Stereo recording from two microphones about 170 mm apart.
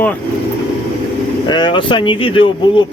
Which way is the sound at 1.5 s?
25° left (ahead or behind).